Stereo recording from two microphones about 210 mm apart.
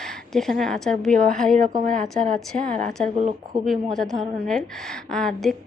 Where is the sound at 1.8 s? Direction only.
40° right (ahead or behind).